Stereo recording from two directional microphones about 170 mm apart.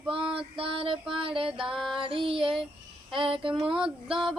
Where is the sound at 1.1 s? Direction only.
30° right (ahead or behind).